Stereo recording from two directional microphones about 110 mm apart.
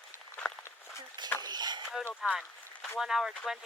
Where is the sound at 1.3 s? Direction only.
40° right (ahead or behind).